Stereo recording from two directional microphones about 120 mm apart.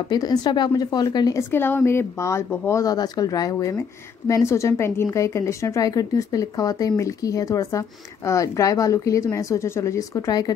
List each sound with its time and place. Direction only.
0.1 s speech: 35° left (ahead or behind)
1.5 s speech: 20° left (ahead or behind)